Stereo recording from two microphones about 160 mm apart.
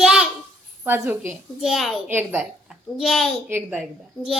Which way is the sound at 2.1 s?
10° right (ahead or behind).